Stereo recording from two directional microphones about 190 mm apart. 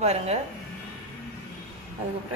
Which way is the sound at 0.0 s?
35° right (ahead or behind).